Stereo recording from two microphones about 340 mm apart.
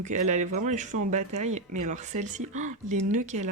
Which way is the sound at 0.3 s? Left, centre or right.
Right.